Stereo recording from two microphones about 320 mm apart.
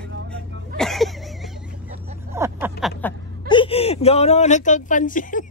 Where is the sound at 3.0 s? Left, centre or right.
Centre.